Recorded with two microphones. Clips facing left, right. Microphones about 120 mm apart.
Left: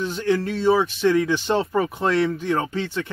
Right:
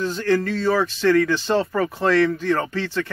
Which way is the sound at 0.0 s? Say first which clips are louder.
Right 1 dB; 15° left (ahead or behind).